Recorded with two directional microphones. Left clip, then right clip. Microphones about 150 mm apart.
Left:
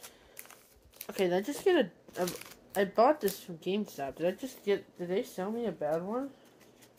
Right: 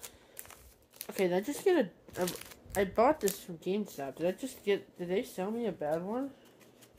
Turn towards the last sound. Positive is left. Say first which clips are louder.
# left 1 dB
turn(degrees=5)  # may be behind; listen again after turning